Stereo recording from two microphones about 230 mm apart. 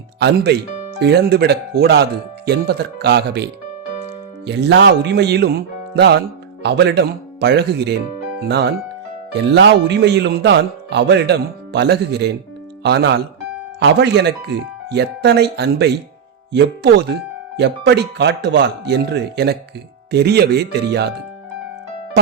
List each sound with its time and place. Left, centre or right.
0.2 s a man's voice: right